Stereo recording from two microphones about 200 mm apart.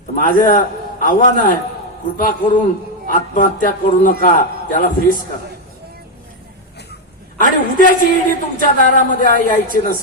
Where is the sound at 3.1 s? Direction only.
45° left (ahead or behind).